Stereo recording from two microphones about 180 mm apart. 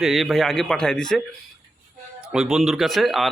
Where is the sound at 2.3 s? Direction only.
5° right (ahead or behind).